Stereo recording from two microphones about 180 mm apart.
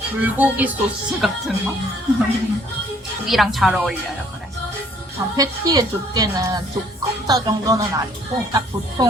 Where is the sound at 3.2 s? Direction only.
Centre (ahead or behind).